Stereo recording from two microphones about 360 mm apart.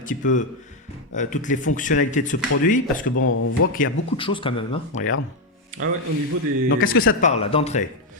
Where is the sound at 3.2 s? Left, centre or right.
Left.